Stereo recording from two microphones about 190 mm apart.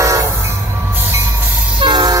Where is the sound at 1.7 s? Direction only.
25° right (ahead or behind).